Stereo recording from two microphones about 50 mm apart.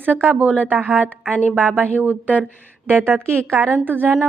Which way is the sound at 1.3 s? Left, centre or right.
Left.